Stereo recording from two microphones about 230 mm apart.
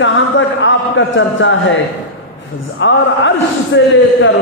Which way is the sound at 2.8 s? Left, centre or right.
Left.